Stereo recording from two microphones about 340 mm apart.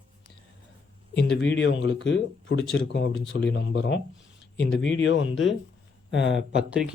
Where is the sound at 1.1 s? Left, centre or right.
Left.